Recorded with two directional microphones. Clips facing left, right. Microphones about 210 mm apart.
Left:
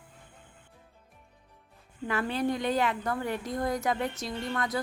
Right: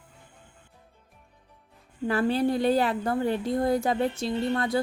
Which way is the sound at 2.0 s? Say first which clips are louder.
Right 5 dB; 35° right (ahead or behind).